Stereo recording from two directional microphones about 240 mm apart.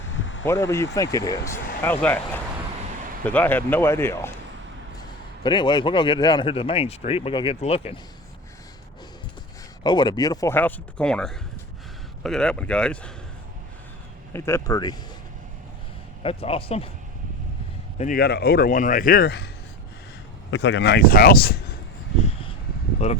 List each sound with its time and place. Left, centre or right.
0.1 s a sound: left
0.4 s a man's voice: centre
9.8 s speech: centre
14.3 s speech: centre
16.2 s a man's voice: left
17.9 s speech: left
20.5 s speech: left
22.2 s a sound: left
23.0 s a man's voice: left